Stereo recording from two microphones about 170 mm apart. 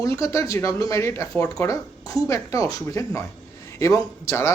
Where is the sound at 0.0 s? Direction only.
20° left (ahead or behind).